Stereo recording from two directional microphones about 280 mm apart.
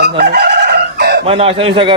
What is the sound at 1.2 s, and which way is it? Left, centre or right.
Speech, right.